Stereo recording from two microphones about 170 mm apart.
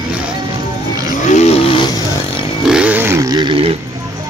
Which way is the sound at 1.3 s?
40° left (ahead or behind).